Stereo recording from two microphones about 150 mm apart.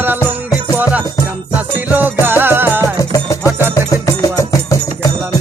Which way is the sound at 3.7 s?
20° left (ahead or behind).